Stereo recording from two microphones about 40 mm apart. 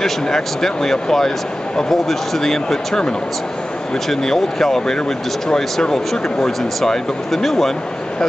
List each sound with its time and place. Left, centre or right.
0.0 s speech: centre
4.1 s speech: centre